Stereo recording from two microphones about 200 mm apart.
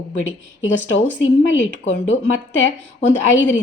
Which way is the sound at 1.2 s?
70° left (ahead or behind).